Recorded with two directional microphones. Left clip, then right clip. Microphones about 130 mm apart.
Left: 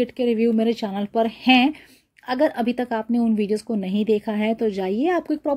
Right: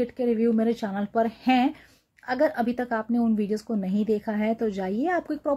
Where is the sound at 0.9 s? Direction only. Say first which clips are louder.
Left 3 dB; 35° left (ahead or behind).